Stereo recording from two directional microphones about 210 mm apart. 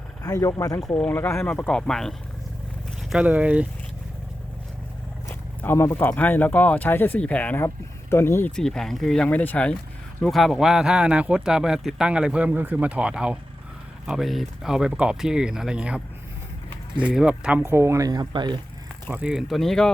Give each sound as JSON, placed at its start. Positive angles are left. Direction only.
{"t": 0.2, "sound": "speech", "side_deg": 15}
{"t": 5.3, "sound": "speech", "side_deg": 10}
{"t": 17.1, "sound": "speech", "side_deg": -5}
{"t": 19.1, "sound": "speech", "side_deg": -5}